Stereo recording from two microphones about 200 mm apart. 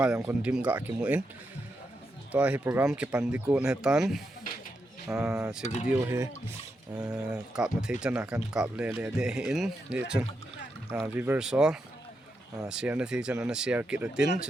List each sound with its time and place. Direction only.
0.0 s speech: 5° right (ahead or behind)
2.3 s speech: 5° right (ahead or behind)
5.6 s speech: 35° left (ahead or behind)
5.9 s speech: 10° right (ahead or behind)